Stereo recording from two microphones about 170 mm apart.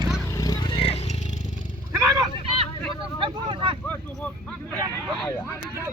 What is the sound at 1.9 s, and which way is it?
Vehicle, 15° right (ahead or behind).